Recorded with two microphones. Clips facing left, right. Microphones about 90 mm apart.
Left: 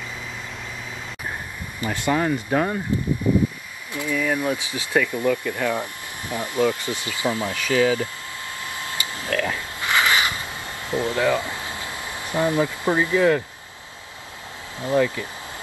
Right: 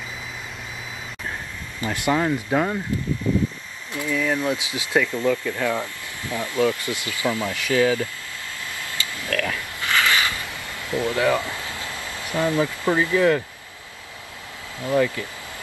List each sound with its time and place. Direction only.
2.1 s speech: 5° right (ahead or behind)
3.9 s speech: 15° left (ahead or behind)
4.6 s speech: 15° right (ahead or behind)
5.0 s speech: 15° left (ahead or behind)
8.7 s a sound: 25° left (ahead or behind)
14.8 s speech: 25° left (ahead or behind)